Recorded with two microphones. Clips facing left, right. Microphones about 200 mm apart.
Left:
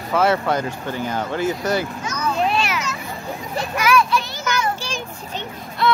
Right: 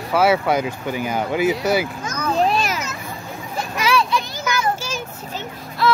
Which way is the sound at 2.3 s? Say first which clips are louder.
Right 3 dB; 40° right (ahead or behind).